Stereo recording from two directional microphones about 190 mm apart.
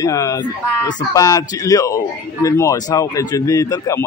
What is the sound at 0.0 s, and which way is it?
Speech, 15° left (ahead or behind).